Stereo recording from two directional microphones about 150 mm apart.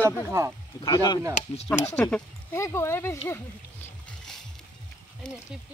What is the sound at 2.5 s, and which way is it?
Speech, 20° left (ahead or behind).